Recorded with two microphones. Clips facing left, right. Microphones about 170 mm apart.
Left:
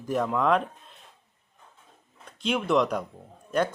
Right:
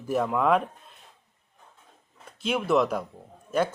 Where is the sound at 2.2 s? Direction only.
5° right (ahead or behind).